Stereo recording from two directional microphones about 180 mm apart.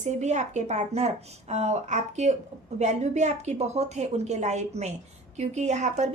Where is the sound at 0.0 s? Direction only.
40° right (ahead or behind).